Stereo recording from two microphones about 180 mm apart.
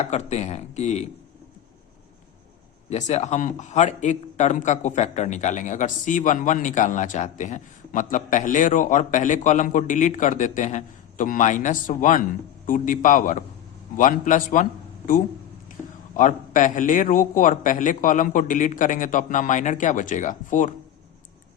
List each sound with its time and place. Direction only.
0.0 s speech: 40° left (ahead or behind)
2.9 s a man's voice: 35° left (ahead or behind)